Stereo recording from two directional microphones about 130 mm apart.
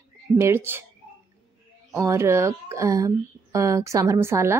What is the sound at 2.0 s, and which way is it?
Speech, 20° right (ahead or behind).